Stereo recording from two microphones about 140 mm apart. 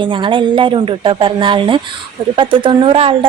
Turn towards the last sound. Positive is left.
turn(degrees=-40)  # may be behind; listen again after turning